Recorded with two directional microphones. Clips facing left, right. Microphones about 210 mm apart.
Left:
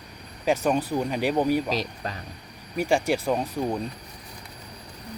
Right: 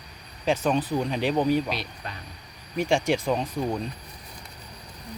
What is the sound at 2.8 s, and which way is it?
Speech, 5° left (ahead or behind).